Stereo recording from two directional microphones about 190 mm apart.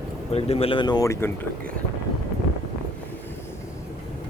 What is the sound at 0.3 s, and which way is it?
Speech, 30° left (ahead or behind).